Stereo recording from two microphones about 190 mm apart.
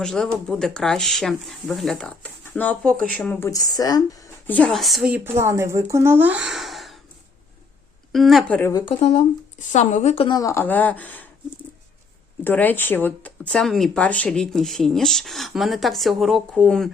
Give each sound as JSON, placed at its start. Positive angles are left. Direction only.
{"t": 0.0, "sound": "speech", "side_deg": 0}
{"t": 3.5, "sound": "speech", "side_deg": 20}
{"t": 8.1, "sound": "speech", "side_deg": 0}
{"t": 8.7, "sound": "a woman's voice", "side_deg": 30}
{"t": 12.5, "sound": "speech", "side_deg": 10}